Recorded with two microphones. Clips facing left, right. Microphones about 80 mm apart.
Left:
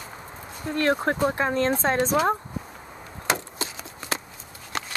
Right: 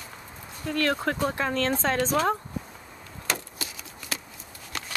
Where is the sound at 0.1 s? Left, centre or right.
Left.